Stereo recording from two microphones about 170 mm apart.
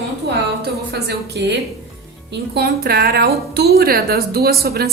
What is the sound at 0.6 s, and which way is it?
Music, 70° right (ahead or behind).